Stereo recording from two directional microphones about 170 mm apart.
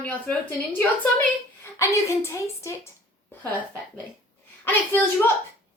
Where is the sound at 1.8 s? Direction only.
15° left (ahead or behind).